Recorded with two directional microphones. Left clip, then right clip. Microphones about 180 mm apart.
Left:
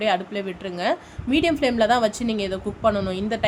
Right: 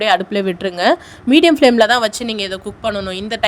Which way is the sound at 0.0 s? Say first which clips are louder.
Right 8 dB; 50° right (ahead or behind).